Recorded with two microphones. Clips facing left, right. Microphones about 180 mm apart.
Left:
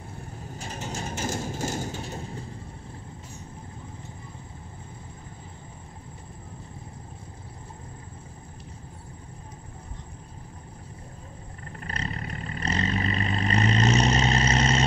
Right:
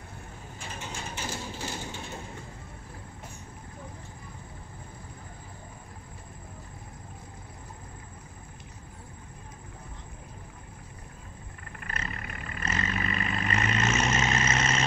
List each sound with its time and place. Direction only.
0.6 s mechanisms: 40° left (ahead or behind)
11.8 s vehicle: 35° left (ahead or behind)